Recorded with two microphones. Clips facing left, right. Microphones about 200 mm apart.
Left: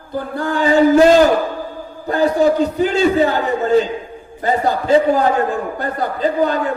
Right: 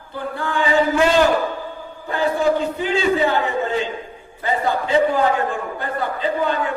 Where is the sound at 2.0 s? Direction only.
40° left (ahead or behind).